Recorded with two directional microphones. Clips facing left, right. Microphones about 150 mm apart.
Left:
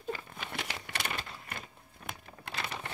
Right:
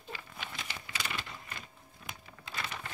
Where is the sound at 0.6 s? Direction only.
60° left (ahead or behind).